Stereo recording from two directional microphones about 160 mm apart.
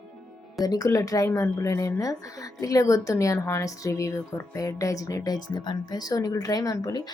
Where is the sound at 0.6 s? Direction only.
25° left (ahead or behind).